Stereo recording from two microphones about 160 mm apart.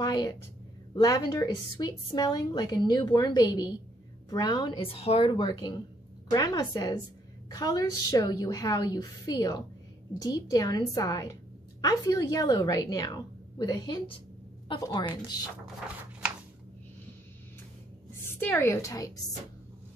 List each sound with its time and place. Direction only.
0.0 s a woman's voice: 25° left (ahead or behind)
5.3 s a woman's voice: 25° left (ahead or behind)
18.4 s a woman's voice: 15° left (ahead or behind)